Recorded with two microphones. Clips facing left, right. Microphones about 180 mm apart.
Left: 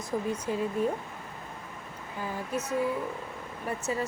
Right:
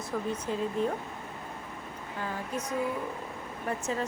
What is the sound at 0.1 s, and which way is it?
Speech, 15° left (ahead or behind).